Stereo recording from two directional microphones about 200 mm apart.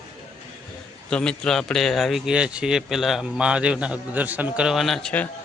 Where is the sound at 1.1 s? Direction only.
5° left (ahead or behind).